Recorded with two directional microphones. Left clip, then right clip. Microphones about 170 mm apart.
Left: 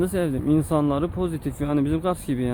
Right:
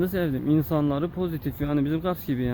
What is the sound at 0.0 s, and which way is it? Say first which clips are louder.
Speech: left 2 dB; centre (ahead or behind).